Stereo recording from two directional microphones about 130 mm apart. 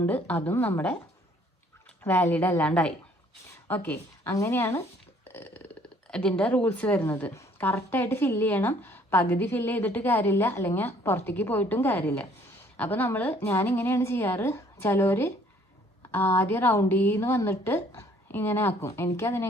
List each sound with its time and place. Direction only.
0.0 s speech: 10° left (ahead or behind)
2.0 s a woman's voice: 15° left (ahead or behind)